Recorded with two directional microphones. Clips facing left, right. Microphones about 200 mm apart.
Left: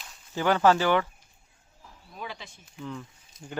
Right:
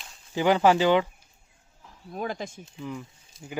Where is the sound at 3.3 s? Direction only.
30° right (ahead or behind).